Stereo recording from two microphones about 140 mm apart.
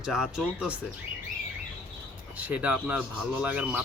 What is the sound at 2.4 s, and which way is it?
Speech, 10° right (ahead or behind).